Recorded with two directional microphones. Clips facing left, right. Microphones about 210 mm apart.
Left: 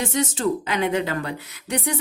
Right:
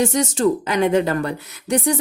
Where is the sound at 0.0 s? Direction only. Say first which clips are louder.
Right 5 dB; 45° right (ahead or behind).